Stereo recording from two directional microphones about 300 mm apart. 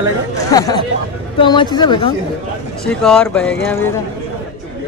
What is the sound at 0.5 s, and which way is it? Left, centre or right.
Speech, centre.